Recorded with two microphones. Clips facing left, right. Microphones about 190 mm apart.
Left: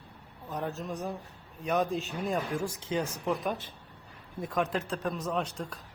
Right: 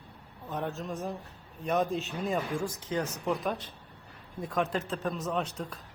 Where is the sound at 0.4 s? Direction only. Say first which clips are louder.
Even; centre (ahead or behind).